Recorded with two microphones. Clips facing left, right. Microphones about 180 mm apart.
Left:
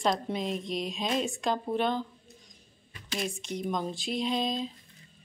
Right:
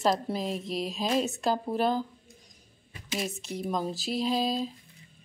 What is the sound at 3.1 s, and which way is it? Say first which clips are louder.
Speech: even; 5° right (ahead or behind).